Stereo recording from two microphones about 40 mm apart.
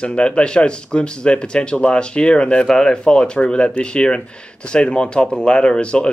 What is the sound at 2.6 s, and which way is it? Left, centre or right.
Speech, centre.